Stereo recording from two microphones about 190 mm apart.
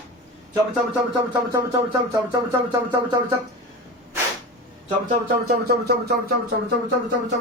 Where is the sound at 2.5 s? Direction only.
20° right (ahead or behind).